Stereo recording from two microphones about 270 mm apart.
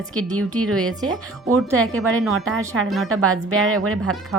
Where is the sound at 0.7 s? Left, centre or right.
Right.